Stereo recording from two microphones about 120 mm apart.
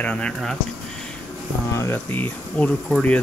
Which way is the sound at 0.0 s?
10° left (ahead or behind).